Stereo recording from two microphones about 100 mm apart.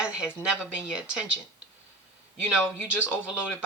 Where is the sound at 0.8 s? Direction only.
10° right (ahead or behind).